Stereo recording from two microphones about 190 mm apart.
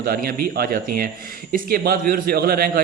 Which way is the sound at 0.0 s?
50° right (ahead or behind).